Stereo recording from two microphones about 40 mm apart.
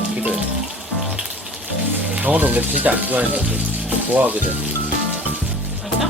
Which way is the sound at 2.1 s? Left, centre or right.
Right.